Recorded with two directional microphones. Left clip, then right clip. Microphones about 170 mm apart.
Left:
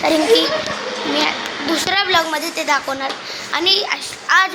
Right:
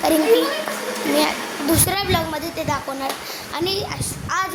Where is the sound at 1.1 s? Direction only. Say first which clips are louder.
Left 1 dB; 35° right (ahead or behind).